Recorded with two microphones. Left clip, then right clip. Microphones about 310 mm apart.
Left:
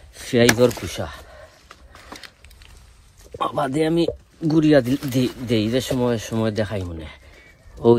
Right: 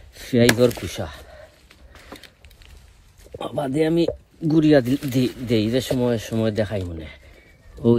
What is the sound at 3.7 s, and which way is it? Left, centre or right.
Speech, centre.